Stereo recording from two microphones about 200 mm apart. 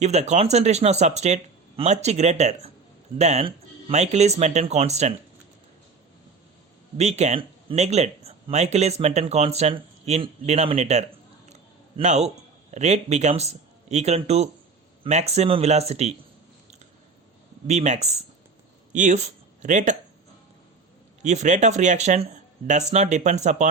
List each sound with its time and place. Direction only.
0.0 s speech: 35° right (ahead or behind)
6.9 s speech: 35° right (ahead or behind)
11.4 s a sound: 35° right (ahead or behind)
12.7 s speech: 35° right (ahead or behind)
17.7 s speech: 35° right (ahead or behind)
21.2 s speech: 35° right (ahead or behind)